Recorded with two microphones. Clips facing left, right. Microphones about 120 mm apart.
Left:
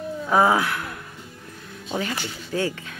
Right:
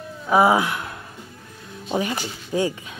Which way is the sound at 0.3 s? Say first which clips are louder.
Right 2 dB; 15° right (ahead or behind).